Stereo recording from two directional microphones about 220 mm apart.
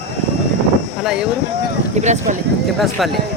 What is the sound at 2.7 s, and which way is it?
Speech, centre (ahead or behind).